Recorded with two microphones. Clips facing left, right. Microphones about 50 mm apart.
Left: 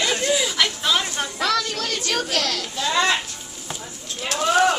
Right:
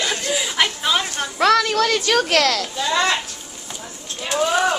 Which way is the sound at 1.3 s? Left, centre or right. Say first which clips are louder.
Right 9 dB; right.